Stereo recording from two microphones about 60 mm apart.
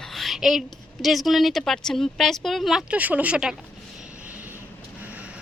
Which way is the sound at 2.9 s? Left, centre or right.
Right.